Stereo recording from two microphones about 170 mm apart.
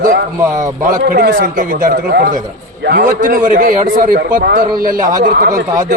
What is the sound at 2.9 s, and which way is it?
A man's voice, 60° right (ahead or behind).